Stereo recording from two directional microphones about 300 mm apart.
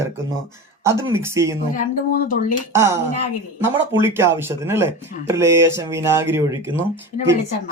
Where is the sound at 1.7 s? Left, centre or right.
Left.